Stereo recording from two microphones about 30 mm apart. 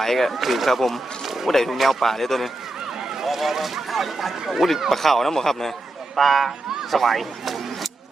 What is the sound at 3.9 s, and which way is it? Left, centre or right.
Speech, centre.